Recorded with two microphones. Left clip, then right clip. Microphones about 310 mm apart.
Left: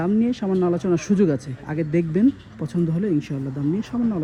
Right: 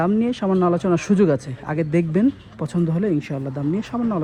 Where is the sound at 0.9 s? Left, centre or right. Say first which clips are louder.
Right 3 dB; centre.